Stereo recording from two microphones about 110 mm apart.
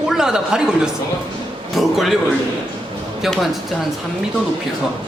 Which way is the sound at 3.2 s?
Centre (ahead or behind).